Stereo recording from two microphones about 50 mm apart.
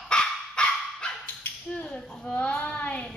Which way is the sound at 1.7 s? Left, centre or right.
Centre.